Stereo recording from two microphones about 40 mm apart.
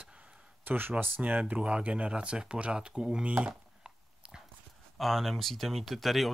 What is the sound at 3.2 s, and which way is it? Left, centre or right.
Speech, right.